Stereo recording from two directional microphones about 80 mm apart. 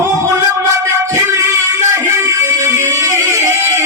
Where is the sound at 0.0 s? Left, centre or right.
Right.